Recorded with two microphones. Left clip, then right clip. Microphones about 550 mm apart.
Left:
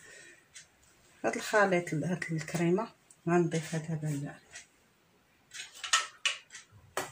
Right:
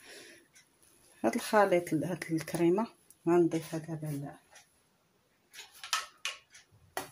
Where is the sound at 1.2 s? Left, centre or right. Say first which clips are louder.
Right 1 dB; right.